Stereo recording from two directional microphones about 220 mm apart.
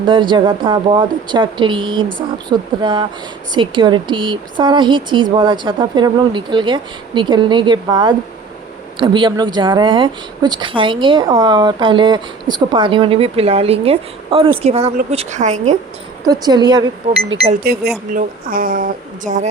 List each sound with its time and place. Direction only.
0.0 s a woman's voice: 20° right (ahead or behind)
16.2 s a woman's voice: 15° right (ahead or behind)
17.6 s a woman's voice: 45° right (ahead or behind)